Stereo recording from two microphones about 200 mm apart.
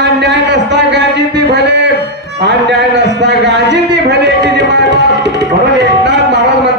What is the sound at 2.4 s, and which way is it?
A man's voice, 60° right (ahead or behind).